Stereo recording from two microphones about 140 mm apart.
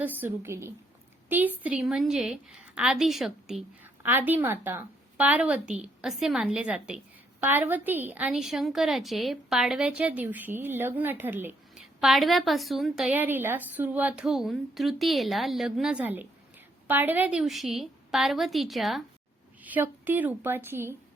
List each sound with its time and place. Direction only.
0.0 s a woman's voice: 15° right (ahead or behind)
4.0 s a woman's voice: 15° right (ahead or behind)
11.9 s a woman's voice: centre (ahead or behind)
19.6 s a woman's voice: 10° right (ahead or behind)